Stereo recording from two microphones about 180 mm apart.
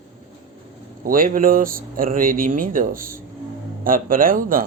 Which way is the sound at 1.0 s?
50° right (ahead or behind).